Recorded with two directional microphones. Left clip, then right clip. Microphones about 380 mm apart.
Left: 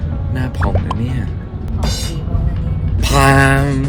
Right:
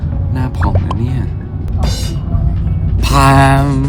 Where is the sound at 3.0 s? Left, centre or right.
Centre.